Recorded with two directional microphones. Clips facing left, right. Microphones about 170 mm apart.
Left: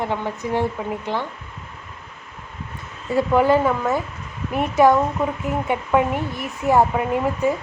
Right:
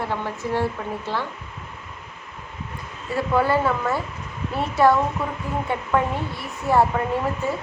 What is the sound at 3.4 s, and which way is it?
Speech, 15° left (ahead or behind).